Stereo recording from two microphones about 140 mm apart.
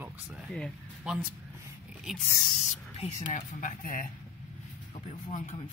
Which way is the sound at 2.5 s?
55° left (ahead or behind).